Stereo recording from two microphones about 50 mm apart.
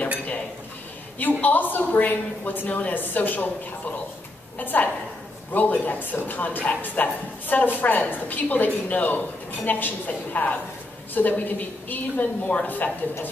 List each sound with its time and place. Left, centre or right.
1.4 s speech: left
4.6 s speech: left